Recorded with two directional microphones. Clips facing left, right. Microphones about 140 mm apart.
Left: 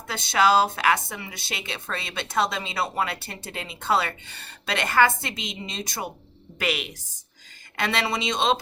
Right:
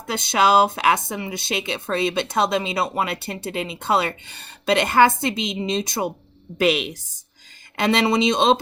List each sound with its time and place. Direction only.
0.1 s speech: 20° right (ahead or behind)